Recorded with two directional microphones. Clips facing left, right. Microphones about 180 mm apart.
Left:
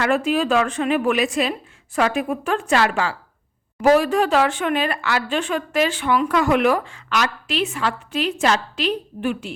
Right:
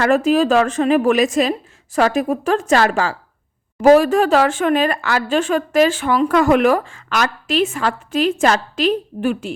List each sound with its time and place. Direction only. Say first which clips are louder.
0.0 s a woman's voice: right 5 dB; 45° right (ahead or behind)